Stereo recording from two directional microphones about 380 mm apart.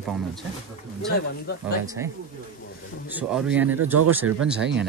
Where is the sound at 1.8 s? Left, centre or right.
Centre.